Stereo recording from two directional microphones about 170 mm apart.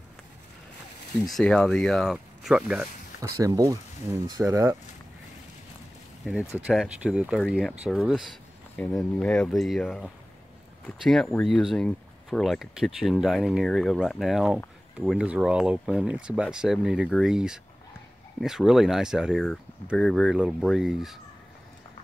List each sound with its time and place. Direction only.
1.2 s speech: 5° left (ahead or behind)
3.2 s speech: 20° right (ahead or behind)
6.5 s speech: 5° right (ahead or behind)